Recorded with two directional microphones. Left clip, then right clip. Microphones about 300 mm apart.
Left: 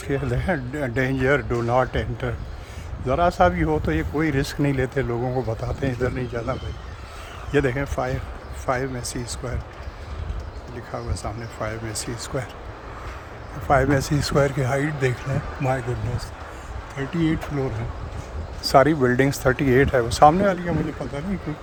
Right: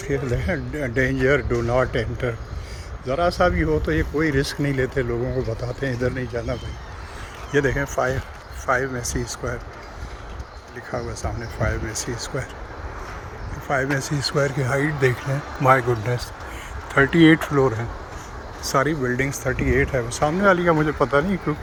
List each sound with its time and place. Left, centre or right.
0.1 s a man's voice: centre
10.9 s speech: centre
13.7 s a man's voice: centre
18.6 s a man's voice: centre
20.4 s speech: centre